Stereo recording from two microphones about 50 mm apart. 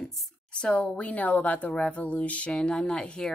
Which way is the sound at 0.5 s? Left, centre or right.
Left.